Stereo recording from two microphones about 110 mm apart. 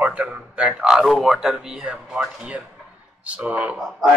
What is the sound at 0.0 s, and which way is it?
A man's voice, 10° right (ahead or behind).